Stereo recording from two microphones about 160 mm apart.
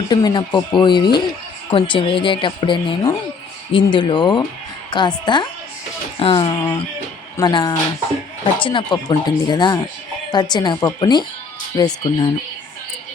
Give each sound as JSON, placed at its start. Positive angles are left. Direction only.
{"t": 0.1, "sound": "speech", "side_deg": 25}